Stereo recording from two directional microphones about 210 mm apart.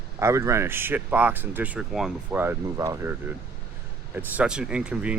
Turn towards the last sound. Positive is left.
turn(degrees=-5)  # may be behind; listen again after turning